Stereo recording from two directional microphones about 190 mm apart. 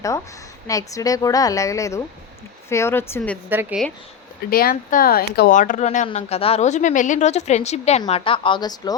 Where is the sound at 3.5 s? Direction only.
10° right (ahead or behind).